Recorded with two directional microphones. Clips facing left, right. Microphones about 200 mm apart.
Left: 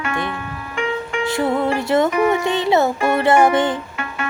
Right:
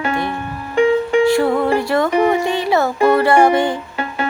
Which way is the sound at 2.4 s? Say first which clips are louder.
Even; 20° left (ahead or behind).